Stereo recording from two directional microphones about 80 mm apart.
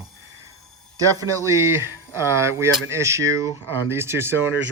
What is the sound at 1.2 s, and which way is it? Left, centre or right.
Speech, right.